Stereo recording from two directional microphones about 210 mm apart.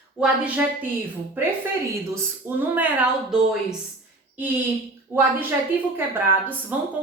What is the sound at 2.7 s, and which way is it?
Speech, 5° right (ahead or behind).